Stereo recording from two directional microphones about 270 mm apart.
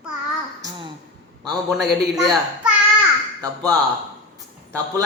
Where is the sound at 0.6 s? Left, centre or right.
Centre.